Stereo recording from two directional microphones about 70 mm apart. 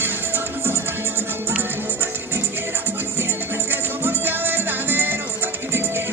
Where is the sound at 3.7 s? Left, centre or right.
Right.